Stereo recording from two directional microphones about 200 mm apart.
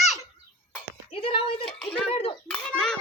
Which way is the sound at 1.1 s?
25° left (ahead or behind).